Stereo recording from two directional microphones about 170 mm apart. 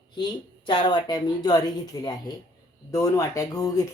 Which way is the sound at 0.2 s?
25° left (ahead or behind).